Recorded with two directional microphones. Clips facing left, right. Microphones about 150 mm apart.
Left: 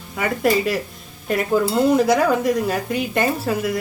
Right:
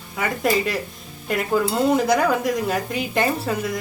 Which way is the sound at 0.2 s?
Centre (ahead or behind).